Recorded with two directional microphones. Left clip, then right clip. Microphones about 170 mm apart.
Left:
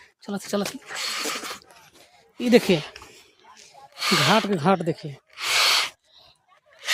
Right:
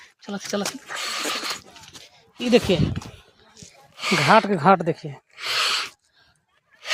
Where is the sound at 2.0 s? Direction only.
35° left (ahead or behind).